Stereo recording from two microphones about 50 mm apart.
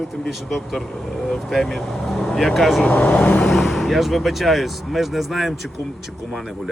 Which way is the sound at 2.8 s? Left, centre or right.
Left.